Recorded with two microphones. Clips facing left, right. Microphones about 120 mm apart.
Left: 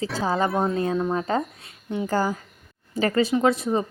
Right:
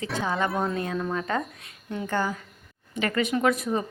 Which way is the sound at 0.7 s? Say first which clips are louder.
Left 5 dB; 25° left (ahead or behind).